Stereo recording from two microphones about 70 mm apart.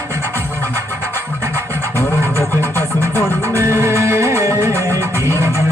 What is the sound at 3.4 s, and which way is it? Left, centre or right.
Music, right.